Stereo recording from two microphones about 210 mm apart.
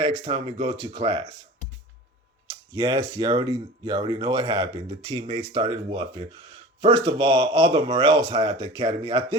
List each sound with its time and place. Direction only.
0.0 s speech: 25° right (ahead or behind)
2.5 s speech: 20° right (ahead or behind)